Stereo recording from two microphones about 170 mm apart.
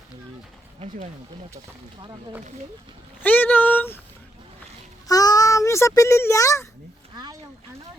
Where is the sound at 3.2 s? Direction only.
10° left (ahead or behind).